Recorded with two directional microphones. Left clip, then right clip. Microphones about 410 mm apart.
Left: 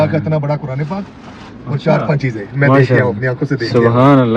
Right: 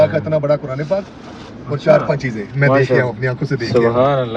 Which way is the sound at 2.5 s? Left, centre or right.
Centre.